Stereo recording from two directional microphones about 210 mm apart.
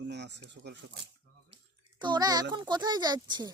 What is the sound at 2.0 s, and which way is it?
Speech, 20° right (ahead or behind).